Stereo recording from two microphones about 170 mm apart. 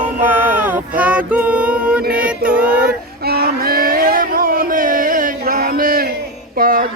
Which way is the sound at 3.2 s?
65° right (ahead or behind).